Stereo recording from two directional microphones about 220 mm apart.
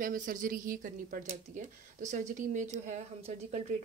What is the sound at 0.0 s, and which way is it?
Speech, 40° right (ahead or behind).